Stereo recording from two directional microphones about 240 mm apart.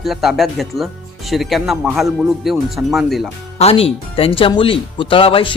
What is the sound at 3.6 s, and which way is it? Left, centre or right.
Speech, left.